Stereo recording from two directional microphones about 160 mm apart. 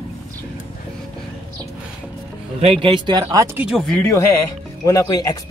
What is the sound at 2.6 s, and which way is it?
Speech, 35° right (ahead or behind).